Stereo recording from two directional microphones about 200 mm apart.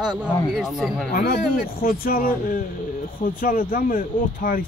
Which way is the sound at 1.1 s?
50° left (ahead or behind).